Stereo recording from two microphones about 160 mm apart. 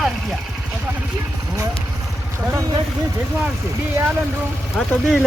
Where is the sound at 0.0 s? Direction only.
Centre (ahead or behind).